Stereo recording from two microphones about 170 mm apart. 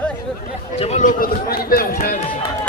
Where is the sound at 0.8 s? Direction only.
45° left (ahead or behind).